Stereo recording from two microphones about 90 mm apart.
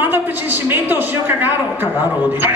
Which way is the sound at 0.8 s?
25° right (ahead or behind).